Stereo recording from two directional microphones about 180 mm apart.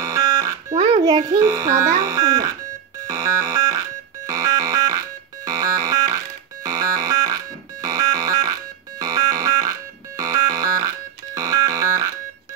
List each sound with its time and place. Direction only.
0.0 s smoke detector: 20° right (ahead or behind)
0.7 s speech: 30° right (ahead or behind)
3.1 s music: 20° right (ahead or behind)
4.3 s synthesizer: 15° right (ahead or behind)
9.0 s a sound: 20° right (ahead or behind)